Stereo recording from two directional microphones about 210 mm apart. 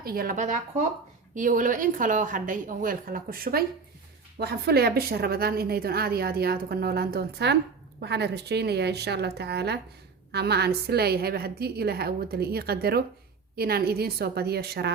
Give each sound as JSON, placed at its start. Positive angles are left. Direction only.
{"t": 0.0, "sound": "a woman's voice", "side_deg": -45}